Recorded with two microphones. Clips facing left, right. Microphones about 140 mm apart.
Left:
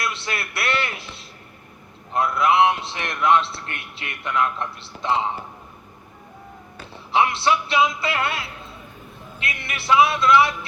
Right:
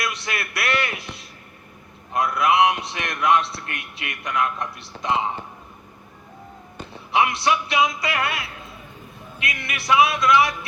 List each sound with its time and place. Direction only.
0.0 s a sound: 30° left (ahead or behind)
2.1 s a man's voice: 25° left (ahead or behind)
7.1 s a man's voice: 30° left (ahead or behind)